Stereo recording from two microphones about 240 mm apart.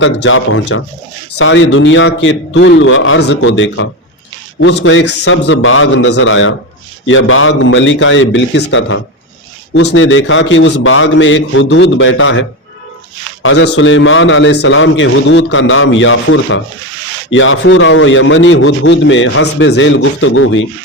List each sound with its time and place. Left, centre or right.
0.0 s a man's voice: left